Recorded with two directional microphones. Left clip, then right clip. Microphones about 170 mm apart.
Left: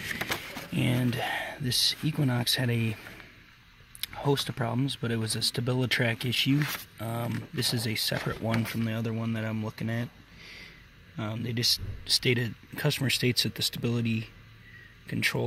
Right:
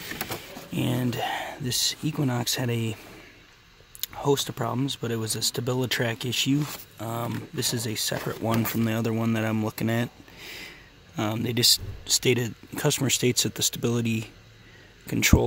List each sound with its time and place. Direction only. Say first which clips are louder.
0.2 s speech: left 2 dB; centre (ahead or behind)
4.0 s speech: right 4 dB; 5° right (ahead or behind)
8.4 s speech: right 5 dB; 20° right (ahead or behind)
12.0 s speech: right 3 dB; 15° right (ahead or behind)